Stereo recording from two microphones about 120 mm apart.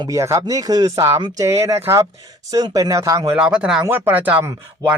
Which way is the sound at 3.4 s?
10° right (ahead or behind).